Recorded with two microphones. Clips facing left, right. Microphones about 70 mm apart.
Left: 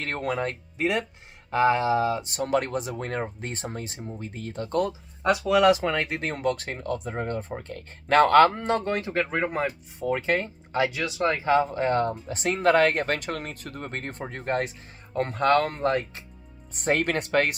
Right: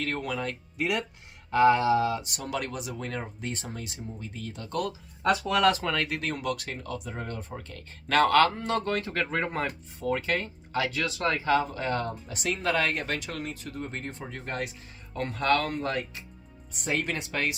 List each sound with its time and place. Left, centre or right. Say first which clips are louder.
0.0 s speech: left 3 dB; left
2.4 s speech: left 7 dB; left
5.2 s speech: left 4 dB; centre
5.6 s speech: left 4 dB; centre
10.0 s speech: left 3 dB; left